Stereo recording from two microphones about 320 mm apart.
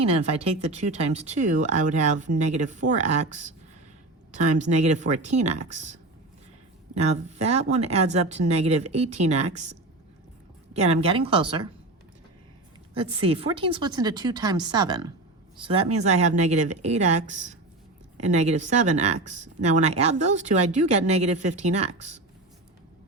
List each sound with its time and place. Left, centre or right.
0.0 s speech: centre
10.8 s speech: centre
12.9 s speech: centre